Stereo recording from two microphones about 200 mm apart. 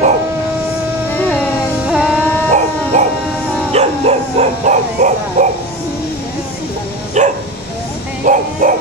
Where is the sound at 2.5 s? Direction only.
35° right (ahead or behind).